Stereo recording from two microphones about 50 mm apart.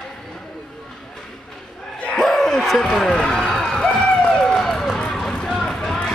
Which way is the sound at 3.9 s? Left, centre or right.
Left.